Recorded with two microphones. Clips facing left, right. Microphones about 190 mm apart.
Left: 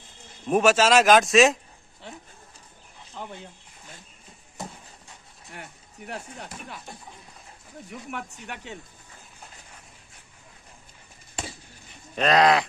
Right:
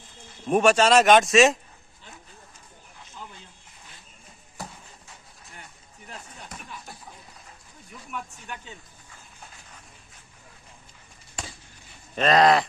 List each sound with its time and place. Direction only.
0.5 s speech: centre (ahead or behind)
3.2 s a sound: 65° left (ahead or behind)
5.5 s speech: 70° left (ahead or behind)
8.1 s speech: 70° left (ahead or behind)
12.2 s speech: centre (ahead or behind)